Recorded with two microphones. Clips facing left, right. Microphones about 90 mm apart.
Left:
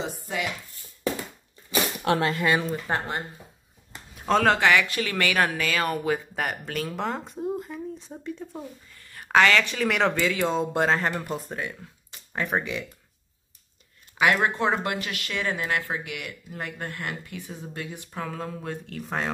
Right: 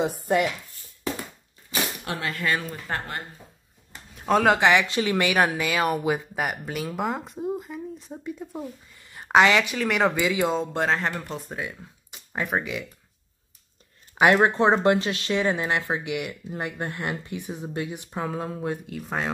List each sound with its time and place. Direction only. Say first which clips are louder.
0.0 s speech: right 8 dB; 50° right (ahead or behind)
2.3 s speech: left 3 dB; 15° left (ahead or behind)
4.3 s speech: right 1 dB; 10° right (ahead or behind)
9.8 s speech: right 1 dB; centre (ahead or behind)
10.2 s speech: right 1 dB; 15° right (ahead or behind)
10.5 s speech: left 1 dB; 5° left (ahead or behind)
14.1 s speech: right 4 dB; 30° right (ahead or behind)
18.9 s speech: right 1 dB; 5° right (ahead or behind)